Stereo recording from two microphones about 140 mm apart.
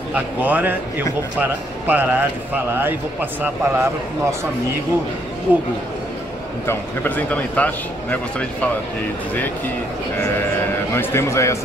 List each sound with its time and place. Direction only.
0.1 s a man's voice: 10° right (ahead or behind)
5.5 s a man's voice: 15° right (ahead or behind)
6.6 s speech: 15° left (ahead or behind)
10.9 s a man's voice: 20° left (ahead or behind)